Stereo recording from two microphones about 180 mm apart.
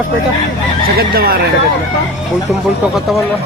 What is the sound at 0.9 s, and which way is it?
Speech, 60° right (ahead or behind).